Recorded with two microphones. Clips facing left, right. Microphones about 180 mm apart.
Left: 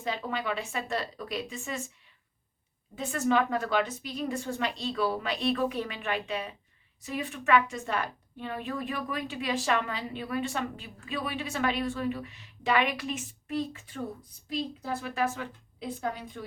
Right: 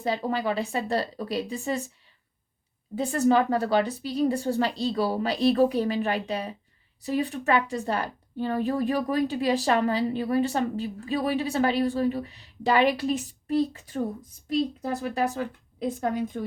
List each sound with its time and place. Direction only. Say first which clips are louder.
0.0 s a woman's voice: right 6 dB; 35° right (ahead or behind)
2.9 s a woman's voice: right 5 dB; 35° right (ahead or behind)